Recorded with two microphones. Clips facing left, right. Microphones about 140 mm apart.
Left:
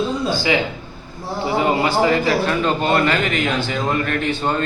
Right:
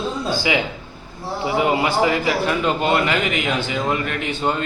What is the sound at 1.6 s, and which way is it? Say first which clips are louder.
A man's voice: left 1 dB; 15° right (ahead or behind).